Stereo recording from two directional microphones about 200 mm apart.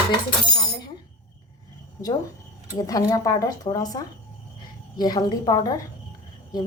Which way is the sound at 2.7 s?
20° left (ahead or behind).